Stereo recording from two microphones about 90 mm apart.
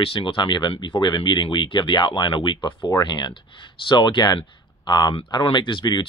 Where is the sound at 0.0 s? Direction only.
80° left.